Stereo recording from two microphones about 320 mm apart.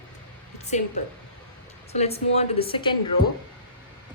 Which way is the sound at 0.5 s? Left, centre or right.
Left.